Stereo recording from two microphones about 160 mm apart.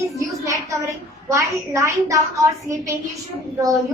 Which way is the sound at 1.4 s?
20° right (ahead or behind).